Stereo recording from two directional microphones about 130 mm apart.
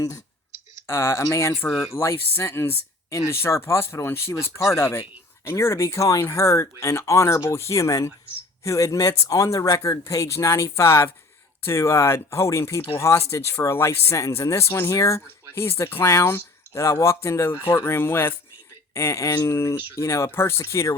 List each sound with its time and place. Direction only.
0.9 s speech: 20° left (ahead or behind)